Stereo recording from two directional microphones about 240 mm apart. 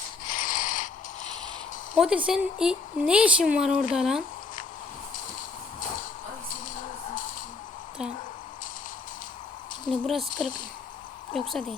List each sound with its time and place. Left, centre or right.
0.3 s mechanisms: left
2.0 s speech: centre
9.9 s speech: centre